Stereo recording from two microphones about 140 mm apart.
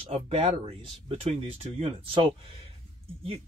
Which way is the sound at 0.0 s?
45° right (ahead or behind).